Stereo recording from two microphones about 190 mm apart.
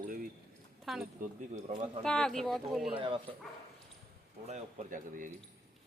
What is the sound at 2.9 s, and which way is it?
Speech, 25° right (ahead or behind).